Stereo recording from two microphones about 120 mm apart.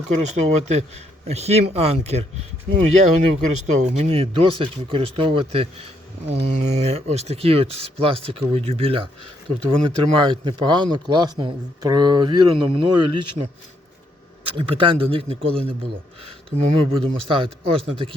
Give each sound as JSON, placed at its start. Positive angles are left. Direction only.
{"t": 0.2, "sound": "speech", "side_deg": -70}
{"t": 2.7, "sound": "speech", "side_deg": -80}
{"t": 14.4, "sound": "speech", "side_deg": -45}
{"t": 16.2, "sound": "speech", "side_deg": -65}
{"t": 17.0, "sound": "speech", "side_deg": -45}